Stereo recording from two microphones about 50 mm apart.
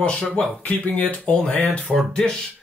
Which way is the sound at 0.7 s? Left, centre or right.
Left.